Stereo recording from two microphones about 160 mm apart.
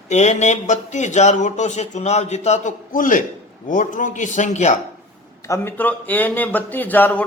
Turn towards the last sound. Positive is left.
turn(degrees=10)  # may be behind; listen again after turning